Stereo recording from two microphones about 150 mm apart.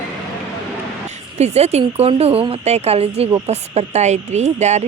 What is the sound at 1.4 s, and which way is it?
A woman's voice, 45° right (ahead or behind).